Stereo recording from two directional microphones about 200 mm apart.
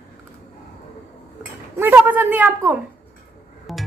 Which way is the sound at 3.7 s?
Centre (ahead or behind).